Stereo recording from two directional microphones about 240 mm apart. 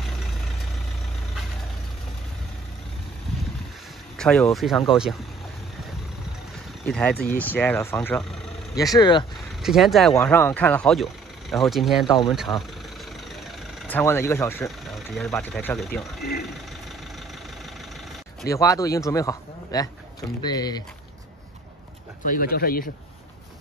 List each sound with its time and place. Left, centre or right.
4.2 s speech: centre
6.9 s a man's voice: centre
8.7 s a man's voice: centre
9.6 s a man's voice: centre
13.4 s vehicle: centre
15.5 s speech: centre
16.2 s speech: left
18.5 s a man's voice: centre
22.2 s speech: left